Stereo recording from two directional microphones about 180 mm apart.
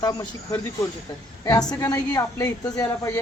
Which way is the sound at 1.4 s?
20° left (ahead or behind).